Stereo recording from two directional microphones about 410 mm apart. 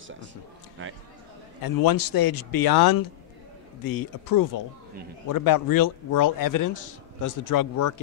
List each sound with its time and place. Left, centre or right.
0.8 s speech: right
1.6 s a man's voice: left